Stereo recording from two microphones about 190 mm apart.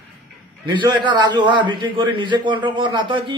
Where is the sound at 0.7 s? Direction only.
25° right (ahead or behind).